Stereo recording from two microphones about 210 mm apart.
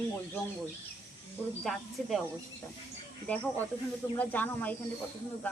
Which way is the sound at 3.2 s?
5° left (ahead or behind).